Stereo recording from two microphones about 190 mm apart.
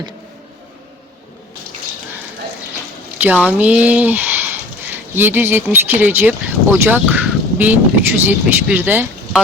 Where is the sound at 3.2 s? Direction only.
10° right (ahead or behind).